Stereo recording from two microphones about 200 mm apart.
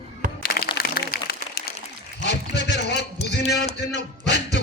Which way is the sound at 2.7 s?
60° left (ahead or behind).